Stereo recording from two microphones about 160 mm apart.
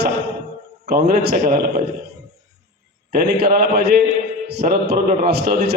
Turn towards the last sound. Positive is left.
turn(degrees=-60)  # may be behind; listen again after turning